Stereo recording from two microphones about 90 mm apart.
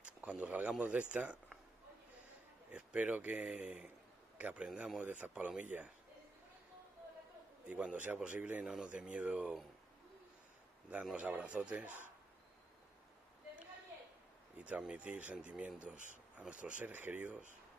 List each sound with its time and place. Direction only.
0.0 s speech: 15° right (ahead or behind)
2.7 s a man's voice: 15° right (ahead or behind)
7.6 s speech: 15° right (ahead or behind)
11.1 s speech: 15° right (ahead or behind)
14.6 s speech: 15° right (ahead or behind)